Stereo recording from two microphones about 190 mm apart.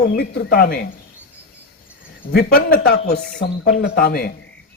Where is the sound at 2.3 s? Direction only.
55° left (ahead or behind).